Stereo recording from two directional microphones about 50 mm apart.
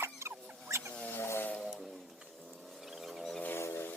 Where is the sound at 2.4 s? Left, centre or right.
Centre.